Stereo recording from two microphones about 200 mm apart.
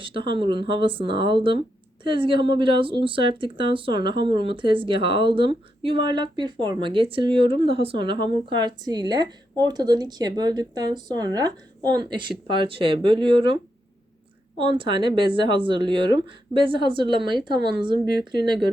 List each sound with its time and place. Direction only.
0.0 s speech: 25° right (ahead or behind)
14.6 s speech: 25° right (ahead or behind)